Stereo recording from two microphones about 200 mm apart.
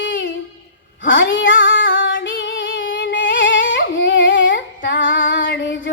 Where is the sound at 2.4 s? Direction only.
65° left (ahead or behind).